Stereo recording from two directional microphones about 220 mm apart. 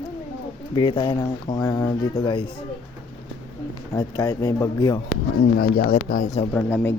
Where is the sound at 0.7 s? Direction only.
20° left (ahead or behind).